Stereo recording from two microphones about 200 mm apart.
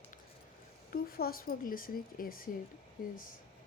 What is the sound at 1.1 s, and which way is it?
Speech, 50° left (ahead or behind).